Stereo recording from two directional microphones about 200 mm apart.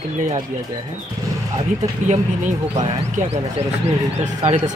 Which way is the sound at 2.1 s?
35° right (ahead or behind).